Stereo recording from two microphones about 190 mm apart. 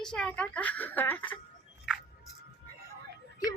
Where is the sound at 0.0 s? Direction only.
5° left (ahead or behind).